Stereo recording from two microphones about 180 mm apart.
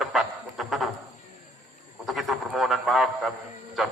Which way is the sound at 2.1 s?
Centre (ahead or behind).